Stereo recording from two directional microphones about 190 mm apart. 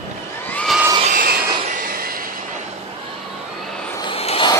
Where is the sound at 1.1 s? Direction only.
50° right (ahead or behind).